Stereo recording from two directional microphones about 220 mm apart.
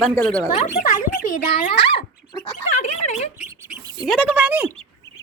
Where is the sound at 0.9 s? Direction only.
35° left (ahead or behind).